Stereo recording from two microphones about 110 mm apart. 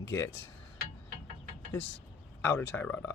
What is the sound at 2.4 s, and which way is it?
Speech, 20° left (ahead or behind).